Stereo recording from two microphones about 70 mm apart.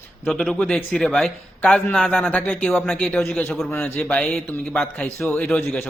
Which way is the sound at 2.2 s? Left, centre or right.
Left.